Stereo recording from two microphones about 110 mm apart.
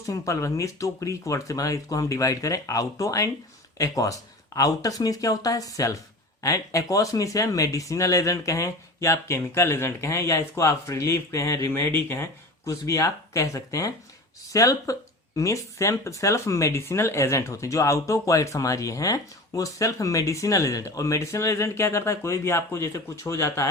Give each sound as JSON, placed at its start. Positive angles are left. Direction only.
{"t": 0.0, "sound": "speech", "side_deg": 30}